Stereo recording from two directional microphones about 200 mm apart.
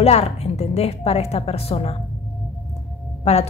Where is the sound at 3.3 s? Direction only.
35° left (ahead or behind).